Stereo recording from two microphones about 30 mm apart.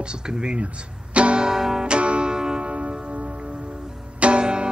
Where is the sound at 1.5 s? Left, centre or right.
Centre.